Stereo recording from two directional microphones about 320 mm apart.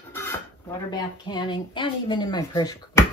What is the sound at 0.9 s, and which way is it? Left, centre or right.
Speech, centre.